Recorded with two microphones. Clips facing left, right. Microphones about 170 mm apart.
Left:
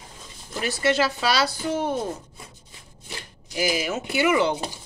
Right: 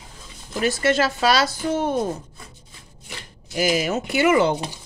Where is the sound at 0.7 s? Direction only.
45° right (ahead or behind).